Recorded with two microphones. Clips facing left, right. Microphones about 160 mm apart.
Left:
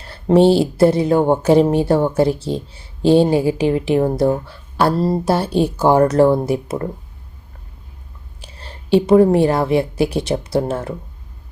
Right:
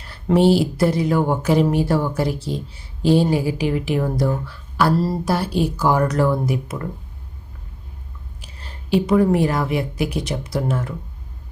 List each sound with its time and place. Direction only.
0.0 s speech: 30° left (ahead or behind)
8.4 s a woman's voice: 30° left (ahead or behind)